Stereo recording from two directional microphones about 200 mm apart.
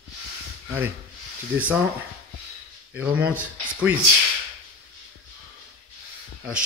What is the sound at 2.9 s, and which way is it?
Speech, 10° right (ahead or behind).